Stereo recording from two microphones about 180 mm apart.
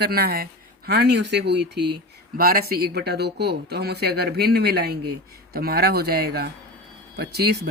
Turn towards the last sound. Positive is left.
turn(degrees=-65)  # may be behind; listen again after turning